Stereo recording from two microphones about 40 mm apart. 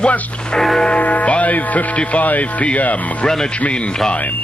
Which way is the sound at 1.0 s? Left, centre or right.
Left.